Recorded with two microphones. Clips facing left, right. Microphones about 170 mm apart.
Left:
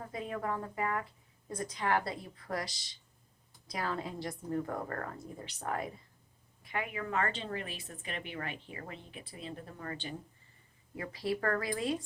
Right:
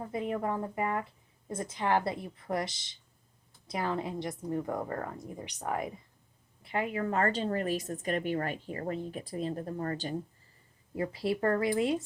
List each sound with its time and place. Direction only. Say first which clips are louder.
0.1 s a woman's voice: right 4 dB; 25° right (ahead or behind)
6.6 s a woman's voice: right 6 dB; 30° right (ahead or behind)
10.9 s a woman's voice: right 4 dB; 30° right (ahead or behind)